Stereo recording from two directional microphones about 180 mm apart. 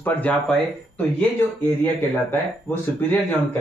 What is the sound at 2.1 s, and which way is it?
Speech, 10° left (ahead or behind).